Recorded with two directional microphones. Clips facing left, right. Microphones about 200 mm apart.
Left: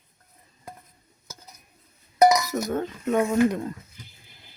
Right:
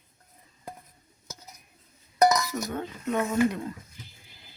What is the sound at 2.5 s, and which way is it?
Chink, 45° left (ahead or behind).